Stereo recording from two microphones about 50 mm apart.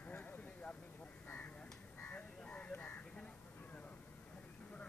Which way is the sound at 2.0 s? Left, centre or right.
Left.